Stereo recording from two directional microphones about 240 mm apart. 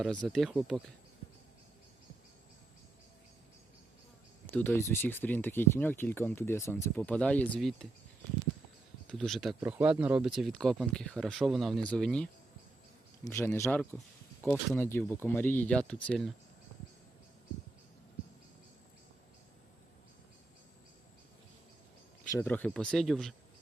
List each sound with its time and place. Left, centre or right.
0.0 s speech: centre
4.5 s speech: centre
9.0 s speech: centre
22.2 s speech: centre